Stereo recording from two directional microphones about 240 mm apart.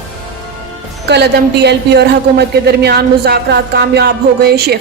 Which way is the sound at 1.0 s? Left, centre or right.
Right.